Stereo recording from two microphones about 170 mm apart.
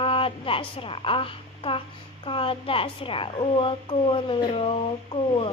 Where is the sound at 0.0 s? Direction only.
30° left (ahead or behind).